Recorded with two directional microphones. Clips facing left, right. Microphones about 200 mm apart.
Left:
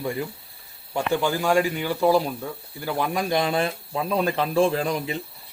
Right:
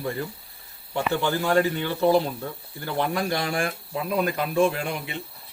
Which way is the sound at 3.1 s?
20° left (ahead or behind).